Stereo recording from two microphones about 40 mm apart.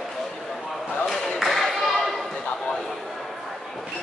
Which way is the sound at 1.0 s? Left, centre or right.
Centre.